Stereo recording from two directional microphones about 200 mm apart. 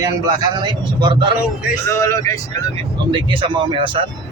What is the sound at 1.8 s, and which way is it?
Speech, 15° left (ahead or behind).